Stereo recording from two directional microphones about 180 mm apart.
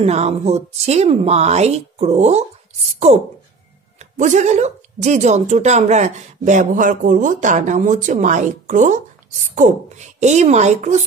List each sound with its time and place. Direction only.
0.0 s speech: 35° right (ahead or behind)
4.0 s a woman's voice: 40° right (ahead or behind)